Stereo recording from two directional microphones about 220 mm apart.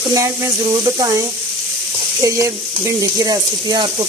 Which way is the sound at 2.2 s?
15° right (ahead or behind).